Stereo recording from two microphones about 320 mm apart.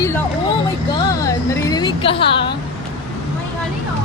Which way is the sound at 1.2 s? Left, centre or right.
Centre.